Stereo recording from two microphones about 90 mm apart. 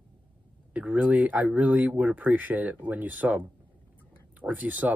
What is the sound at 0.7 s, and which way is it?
Speech, 15° right (ahead or behind).